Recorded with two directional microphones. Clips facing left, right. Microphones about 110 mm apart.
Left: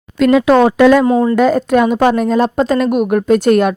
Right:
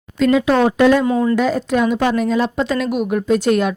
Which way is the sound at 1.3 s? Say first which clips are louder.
Left 5 dB; 50° left (ahead or behind).